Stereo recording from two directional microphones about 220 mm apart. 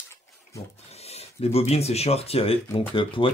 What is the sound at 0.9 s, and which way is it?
Speech, 30° left (ahead or behind).